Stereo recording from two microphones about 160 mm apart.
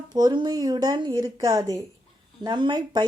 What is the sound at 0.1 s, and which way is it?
A woman's voice, 25° right (ahead or behind).